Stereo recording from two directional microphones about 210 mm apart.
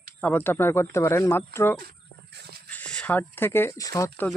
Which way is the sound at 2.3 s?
50° right (ahead or behind).